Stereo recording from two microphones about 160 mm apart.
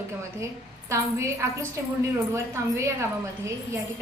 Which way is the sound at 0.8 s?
20° right (ahead or behind).